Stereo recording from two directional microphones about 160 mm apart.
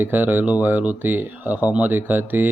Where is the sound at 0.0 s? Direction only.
10° right (ahead or behind).